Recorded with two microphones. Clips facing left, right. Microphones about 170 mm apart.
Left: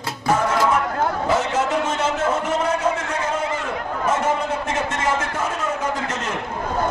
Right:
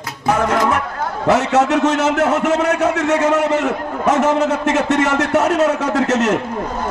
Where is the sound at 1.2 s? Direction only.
75° right (ahead or behind).